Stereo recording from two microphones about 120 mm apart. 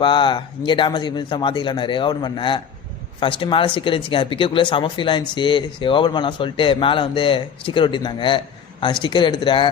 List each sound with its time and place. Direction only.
0.0 s speech: 45° left (ahead or behind)